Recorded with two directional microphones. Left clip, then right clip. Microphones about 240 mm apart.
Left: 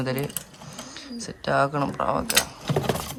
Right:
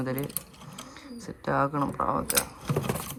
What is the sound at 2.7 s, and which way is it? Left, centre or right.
Clip-clop, left.